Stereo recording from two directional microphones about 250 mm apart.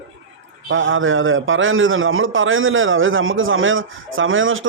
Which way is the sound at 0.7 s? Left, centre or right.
Right.